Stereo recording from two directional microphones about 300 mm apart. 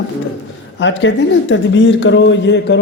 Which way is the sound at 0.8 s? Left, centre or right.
Left.